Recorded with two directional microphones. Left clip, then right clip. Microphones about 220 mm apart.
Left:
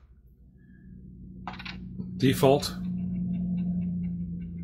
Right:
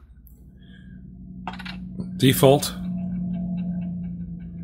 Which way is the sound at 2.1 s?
30° right (ahead or behind).